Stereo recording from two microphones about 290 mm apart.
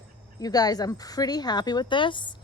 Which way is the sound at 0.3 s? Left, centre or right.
Centre.